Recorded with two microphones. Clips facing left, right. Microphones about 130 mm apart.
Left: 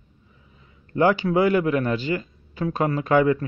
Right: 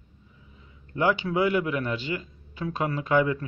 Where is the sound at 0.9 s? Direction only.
45° left (ahead or behind).